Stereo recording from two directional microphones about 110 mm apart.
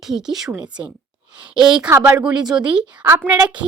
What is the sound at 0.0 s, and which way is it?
A woman's voice, 5° right (ahead or behind).